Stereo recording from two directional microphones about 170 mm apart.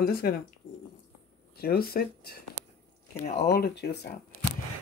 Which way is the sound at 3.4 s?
70° left (ahead or behind).